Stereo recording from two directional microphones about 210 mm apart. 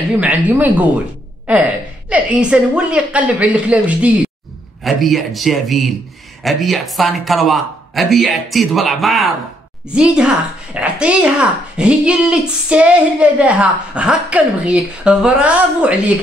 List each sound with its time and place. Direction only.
0.2 s a woman's voice: 10° right (ahead or behind)